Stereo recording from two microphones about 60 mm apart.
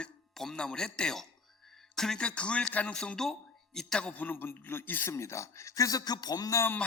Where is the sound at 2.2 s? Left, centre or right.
Centre.